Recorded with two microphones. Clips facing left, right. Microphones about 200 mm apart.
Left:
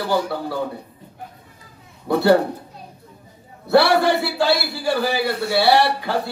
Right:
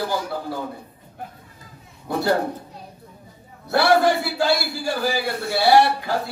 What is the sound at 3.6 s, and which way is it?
A man's voice, 65° left (ahead or behind).